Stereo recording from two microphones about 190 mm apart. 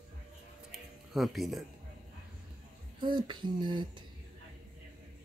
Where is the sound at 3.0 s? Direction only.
25° right (ahead or behind).